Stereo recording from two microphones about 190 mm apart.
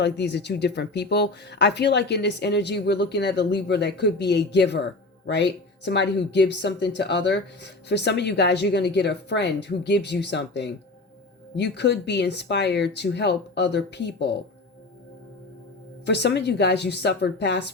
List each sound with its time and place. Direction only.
0.0 s speech: 65° left (ahead or behind)
16.0 s speech: 65° left (ahead or behind)